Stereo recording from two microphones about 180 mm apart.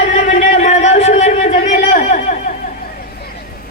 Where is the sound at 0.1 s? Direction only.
40° left (ahead or behind).